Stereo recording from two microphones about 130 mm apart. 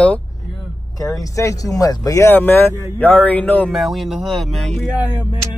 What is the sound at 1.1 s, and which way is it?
Speech, 25° left (ahead or behind).